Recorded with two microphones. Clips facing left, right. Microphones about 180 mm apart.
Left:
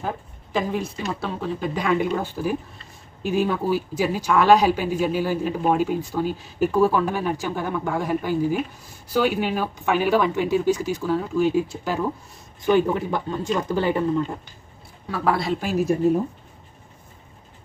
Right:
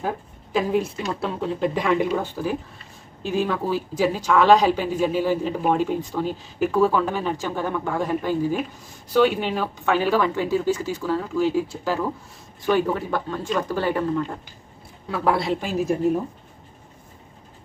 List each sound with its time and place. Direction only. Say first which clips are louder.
0.0 s speech: right 2 dB; centre (ahead or behind)
3.2 s speech: left 1 dB; 15° left (ahead or behind)
15.0 s speech: right 1 dB; centre (ahead or behind)